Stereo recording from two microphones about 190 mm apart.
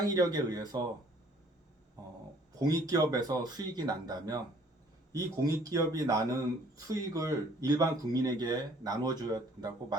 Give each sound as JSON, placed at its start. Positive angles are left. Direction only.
{"t": 0.0, "sound": "speech", "side_deg": -20}
{"t": 2.6, "sound": "speech", "side_deg": -20}